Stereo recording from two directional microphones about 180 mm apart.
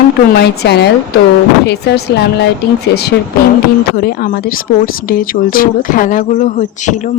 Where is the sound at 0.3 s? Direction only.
65° left (ahead or behind).